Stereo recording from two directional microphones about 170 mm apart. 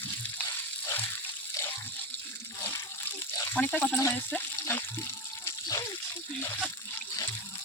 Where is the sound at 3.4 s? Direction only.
10° left (ahead or behind).